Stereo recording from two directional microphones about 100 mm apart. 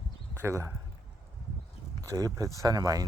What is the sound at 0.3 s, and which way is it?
Speech, 30° right (ahead or behind).